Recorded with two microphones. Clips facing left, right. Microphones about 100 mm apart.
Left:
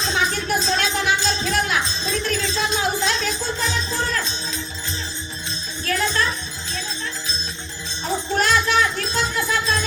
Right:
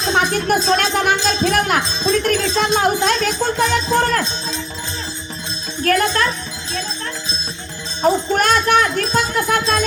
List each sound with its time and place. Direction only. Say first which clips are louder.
0.0 s music: right 5 dB; 50° right (ahead or behind)
5.8 s music: right 6 dB; 55° right (ahead or behind)
8.3 s music: right 4 dB; 55° right (ahead or behind)